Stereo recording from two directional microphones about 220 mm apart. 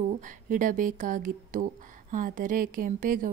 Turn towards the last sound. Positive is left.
turn(degrees=-40)  # may be behind; listen again after turning